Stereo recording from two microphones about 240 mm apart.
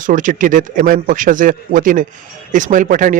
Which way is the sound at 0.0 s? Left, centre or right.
Right.